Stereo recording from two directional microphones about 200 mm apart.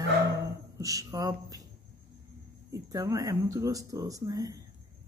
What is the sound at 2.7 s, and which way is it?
Speech, 15° right (ahead or behind).